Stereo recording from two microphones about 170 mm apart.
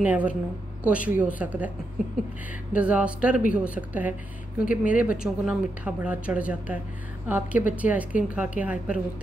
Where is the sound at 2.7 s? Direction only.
10° right (ahead or behind).